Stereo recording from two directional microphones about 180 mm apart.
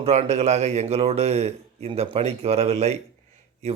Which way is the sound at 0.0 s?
35° right (ahead or behind).